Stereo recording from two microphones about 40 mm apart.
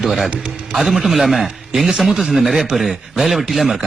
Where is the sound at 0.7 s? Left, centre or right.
Centre.